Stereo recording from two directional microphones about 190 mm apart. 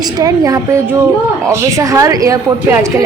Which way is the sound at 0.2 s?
20° right (ahead or behind).